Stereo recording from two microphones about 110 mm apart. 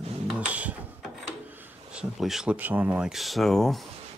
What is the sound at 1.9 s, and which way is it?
Speech, centre (ahead or behind).